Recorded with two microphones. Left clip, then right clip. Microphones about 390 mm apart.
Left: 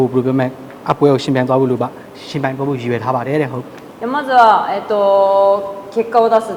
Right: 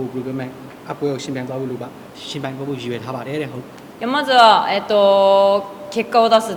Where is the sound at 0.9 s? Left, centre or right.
Left.